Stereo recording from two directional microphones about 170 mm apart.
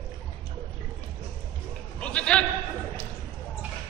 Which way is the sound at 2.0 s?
5° left (ahead or behind).